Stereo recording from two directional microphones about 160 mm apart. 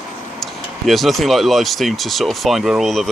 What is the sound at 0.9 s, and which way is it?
Speech, centre (ahead or behind).